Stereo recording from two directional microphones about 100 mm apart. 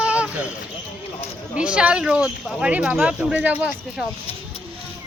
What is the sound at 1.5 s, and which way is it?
Speech, 10° right (ahead or behind).